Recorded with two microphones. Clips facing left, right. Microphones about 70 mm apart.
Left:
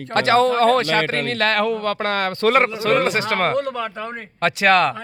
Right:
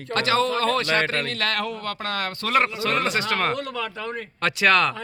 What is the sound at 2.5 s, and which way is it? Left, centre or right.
A man's voice, left.